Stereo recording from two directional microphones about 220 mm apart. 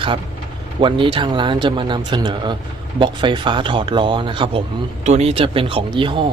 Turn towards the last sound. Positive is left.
turn(degrees=-20)  # may be behind; listen again after turning